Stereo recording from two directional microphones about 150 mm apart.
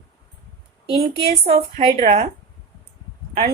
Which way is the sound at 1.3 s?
45° right (ahead or behind).